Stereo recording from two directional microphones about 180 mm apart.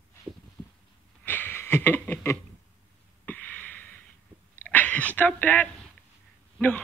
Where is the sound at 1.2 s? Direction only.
10° left (ahead or behind).